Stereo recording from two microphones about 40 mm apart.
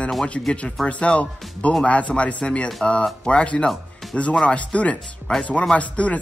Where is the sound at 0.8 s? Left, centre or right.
Left.